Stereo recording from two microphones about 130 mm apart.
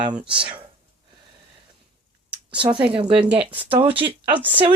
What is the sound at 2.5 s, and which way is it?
Speech, 40° right (ahead or behind).